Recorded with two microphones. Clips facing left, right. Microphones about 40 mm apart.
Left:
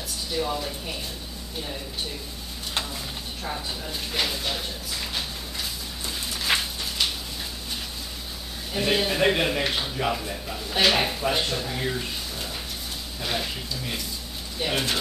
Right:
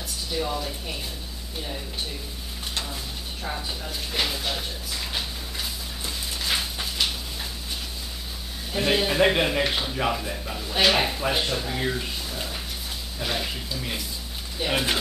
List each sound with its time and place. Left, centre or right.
0.3 s speech: centre
3.4 s drawer open or close: centre
6.5 s a sound: centre
8.7 s speech: centre